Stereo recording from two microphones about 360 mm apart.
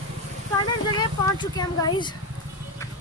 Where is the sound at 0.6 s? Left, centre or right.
Centre.